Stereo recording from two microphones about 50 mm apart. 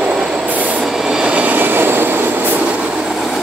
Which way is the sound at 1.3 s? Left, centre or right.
Right.